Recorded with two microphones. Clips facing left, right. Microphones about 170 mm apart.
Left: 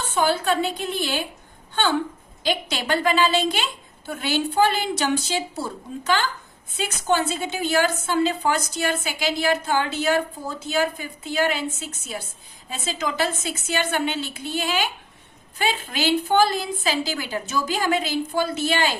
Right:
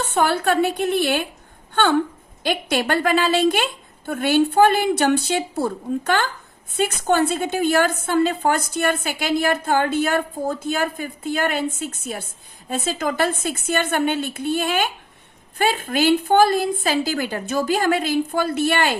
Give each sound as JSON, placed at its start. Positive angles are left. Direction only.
{"t": 0.0, "sound": "a woman's voice", "side_deg": -65}